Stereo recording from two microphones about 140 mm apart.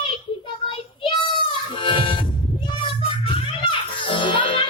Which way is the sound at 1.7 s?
40° left (ahead or behind).